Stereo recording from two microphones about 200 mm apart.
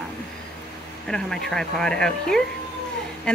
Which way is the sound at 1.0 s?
5° left (ahead or behind).